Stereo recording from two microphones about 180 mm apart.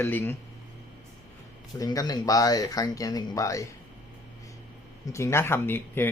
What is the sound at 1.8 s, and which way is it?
Speech, 20° left (ahead or behind).